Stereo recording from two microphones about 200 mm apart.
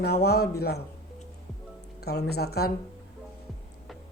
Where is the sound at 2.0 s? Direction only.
55° left (ahead or behind).